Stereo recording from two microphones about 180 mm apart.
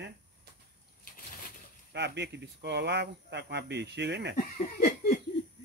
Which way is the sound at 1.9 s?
70° right (ahead or behind).